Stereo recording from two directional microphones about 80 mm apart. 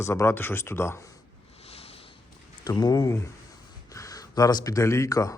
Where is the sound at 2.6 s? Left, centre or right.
Left.